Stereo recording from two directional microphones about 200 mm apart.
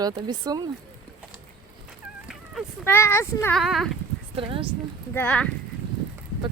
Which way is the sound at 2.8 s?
10° left (ahead or behind).